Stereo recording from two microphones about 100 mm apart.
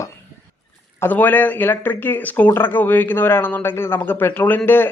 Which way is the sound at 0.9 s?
20° left (ahead or behind).